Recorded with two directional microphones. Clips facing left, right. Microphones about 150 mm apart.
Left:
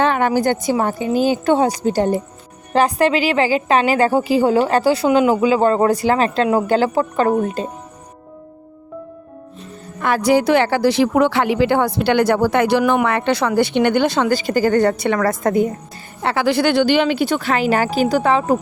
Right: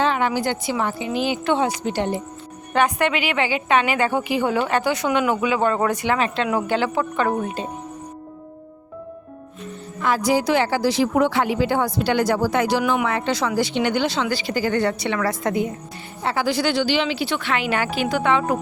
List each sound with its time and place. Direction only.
0.0 s a woman's voice: 50° left (ahead or behind)
10.0 s speech: 60° left (ahead or behind); by 15.7 s 45° left (ahead or behind)
16.2 s speech: 70° left (ahead or behind); by 18.5 s 35° left (ahead or behind)